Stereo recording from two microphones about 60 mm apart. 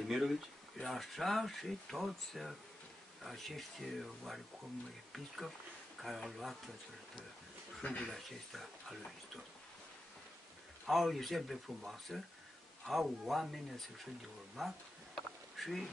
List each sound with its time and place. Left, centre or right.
0.1 s speech: centre
6.0 s speech: centre
7.8 s speech: left
8.1 s speech: centre
10.9 s speech: centre
15.1 s a sound: centre